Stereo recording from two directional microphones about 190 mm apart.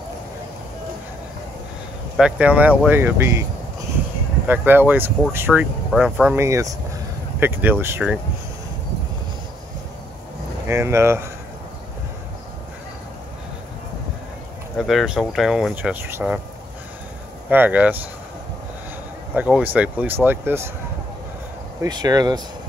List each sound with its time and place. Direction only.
2.1 s speech: 5° right (ahead or behind)
4.5 s speech: 10° right (ahead or behind)
6.3 s speech: 15° right (ahead or behind)
10.7 s speech: 15° right (ahead or behind)
14.8 s speech: centre (ahead or behind)
17.5 s speech: 10° right (ahead or behind)
19.3 s speech: 5° right (ahead or behind)
21.8 s speech: 20° right (ahead or behind)